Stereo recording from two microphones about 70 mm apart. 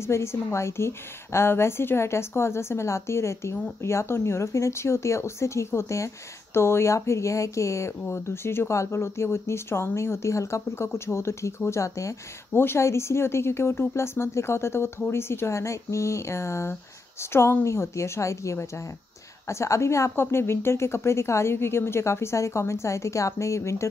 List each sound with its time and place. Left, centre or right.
0.0 s speech: left
12.5 s speech: left